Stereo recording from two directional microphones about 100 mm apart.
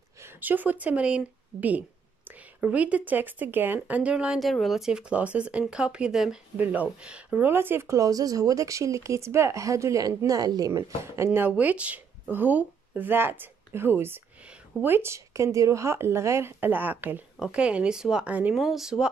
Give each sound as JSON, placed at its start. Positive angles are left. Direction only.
{"t": 0.2, "sound": "speech", "side_deg": -20}
{"t": 4.4, "sound": "speech", "side_deg": 0}
{"t": 11.3, "sound": "a woman's voice", "side_deg": -15}
{"t": 18.5, "sound": "speech", "side_deg": -5}